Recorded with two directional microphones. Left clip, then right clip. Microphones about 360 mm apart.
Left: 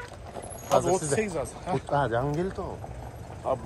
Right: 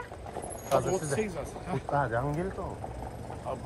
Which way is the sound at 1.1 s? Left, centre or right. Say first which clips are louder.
Left 4 dB; centre.